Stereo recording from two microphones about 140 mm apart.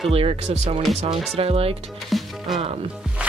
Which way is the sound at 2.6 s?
45° right (ahead or behind).